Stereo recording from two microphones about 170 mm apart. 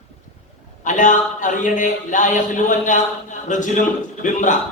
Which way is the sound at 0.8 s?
50° left (ahead or behind).